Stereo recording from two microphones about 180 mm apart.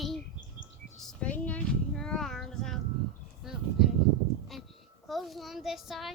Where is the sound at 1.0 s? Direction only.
5° left (ahead or behind).